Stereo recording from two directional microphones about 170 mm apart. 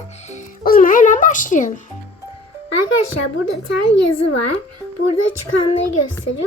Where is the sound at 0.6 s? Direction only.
55° left (ahead or behind).